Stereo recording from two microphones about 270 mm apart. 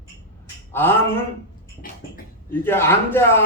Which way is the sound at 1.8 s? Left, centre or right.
Left.